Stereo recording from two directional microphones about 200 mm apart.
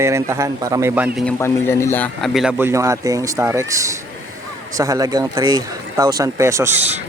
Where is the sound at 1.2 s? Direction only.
10° left (ahead or behind).